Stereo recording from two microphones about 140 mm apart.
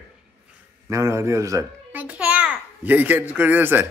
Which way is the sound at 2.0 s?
10° right (ahead or behind).